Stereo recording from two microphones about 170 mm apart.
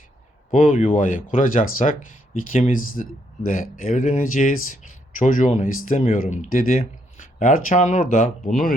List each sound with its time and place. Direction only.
0.5 s speech: 50° left (ahead or behind)